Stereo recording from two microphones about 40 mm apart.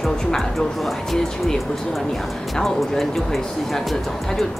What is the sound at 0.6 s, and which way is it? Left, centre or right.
Speech, centre.